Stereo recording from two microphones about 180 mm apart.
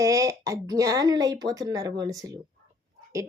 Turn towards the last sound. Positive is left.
turn(degrees=-20)  # may be behind; listen again after turning